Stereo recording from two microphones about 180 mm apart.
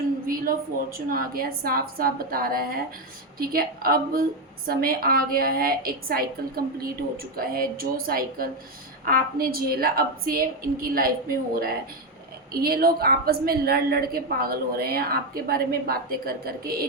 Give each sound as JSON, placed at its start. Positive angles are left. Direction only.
{"t": 0.3, "sound": "a woman's voice", "side_deg": -55}
{"t": 7.3, "sound": "a woman's voice", "side_deg": -55}